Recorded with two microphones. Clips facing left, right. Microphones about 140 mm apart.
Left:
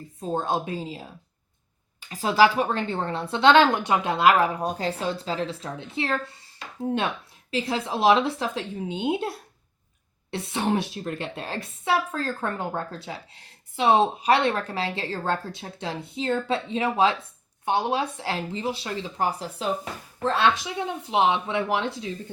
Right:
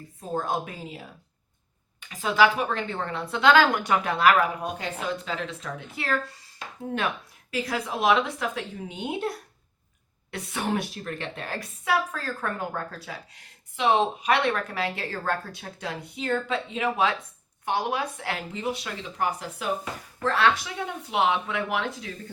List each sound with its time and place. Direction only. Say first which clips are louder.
0.2 s a woman's voice: left 2 dB; 25° left (ahead or behind)
7.5 s a woman's voice: left 2 dB; 30° left (ahead or behind)